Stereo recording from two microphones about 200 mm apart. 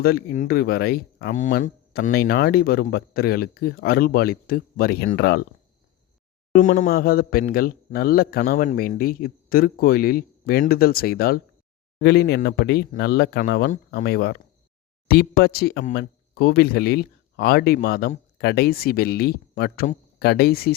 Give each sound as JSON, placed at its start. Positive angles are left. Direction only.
{"t": 0.0, "sound": "a man's voice", "side_deg": 50}
{"t": 6.5, "sound": "a man's voice", "side_deg": 40}